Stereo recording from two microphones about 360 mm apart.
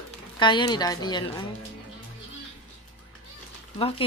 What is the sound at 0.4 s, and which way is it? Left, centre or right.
Speech, centre.